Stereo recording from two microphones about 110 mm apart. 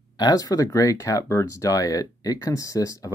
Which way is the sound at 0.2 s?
35° left (ahead or behind).